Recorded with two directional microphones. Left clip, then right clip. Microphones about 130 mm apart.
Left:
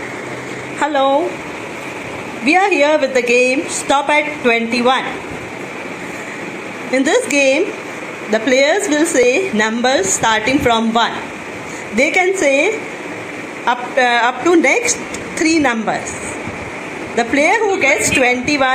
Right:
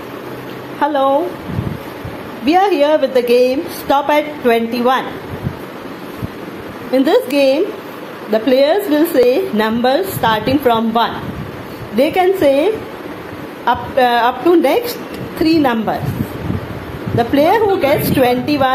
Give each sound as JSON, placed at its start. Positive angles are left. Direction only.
{"t": 0.7, "sound": "a woman's voice", "side_deg": 0}
{"t": 2.4, "sound": "a woman's voice", "side_deg": -10}
{"t": 6.9, "sound": "a woman's voice", "side_deg": -10}
{"t": 17.2, "sound": "a woman's voice", "side_deg": -15}